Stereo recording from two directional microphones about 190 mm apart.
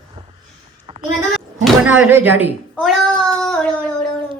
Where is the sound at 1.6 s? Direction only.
5° right (ahead or behind).